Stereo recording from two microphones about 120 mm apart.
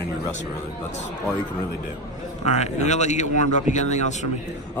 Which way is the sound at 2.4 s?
70° left (ahead or behind).